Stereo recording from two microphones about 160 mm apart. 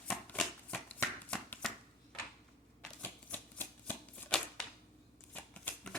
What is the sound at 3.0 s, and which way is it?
Shuffling cards, 10° left (ahead or behind).